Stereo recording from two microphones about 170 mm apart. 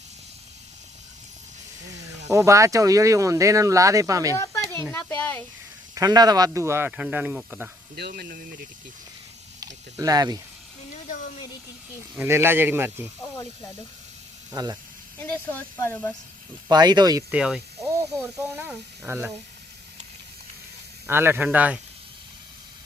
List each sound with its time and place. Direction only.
2.3 s speech: 20° right (ahead or behind)
4.4 s a sound: 15° left (ahead or behind)
5.9 s speech: 20° right (ahead or behind)
7.9 s speech: 70° right (ahead or behind)
9.6 s a sound: 20° right (ahead or behind)
12.1 s speech: 15° right (ahead or behind)
14.5 s speech: 25° right (ahead or behind)
15.2 s speech: 10° left (ahead or behind)
16.6 s speech: 25° right (ahead or behind)
17.3 s speech: 5° right (ahead or behind)
17.7 s speech: 15° right (ahead or behind)
21.1 s speech: 15° right (ahead or behind)